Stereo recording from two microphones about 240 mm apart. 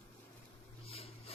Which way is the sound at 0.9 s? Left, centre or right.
Left.